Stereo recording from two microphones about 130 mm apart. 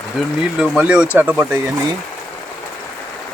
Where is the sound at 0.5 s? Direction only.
5° right (ahead or behind).